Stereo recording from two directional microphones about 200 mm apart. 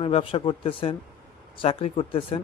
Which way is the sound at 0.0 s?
25° left (ahead or behind).